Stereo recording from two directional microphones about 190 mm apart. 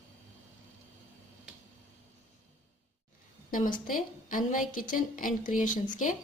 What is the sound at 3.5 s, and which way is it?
A woman's voice, 45° left (ahead or behind).